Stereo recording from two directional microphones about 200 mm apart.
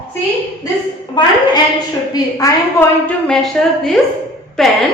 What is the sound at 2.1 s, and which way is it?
A woman's voice, 15° left (ahead or behind).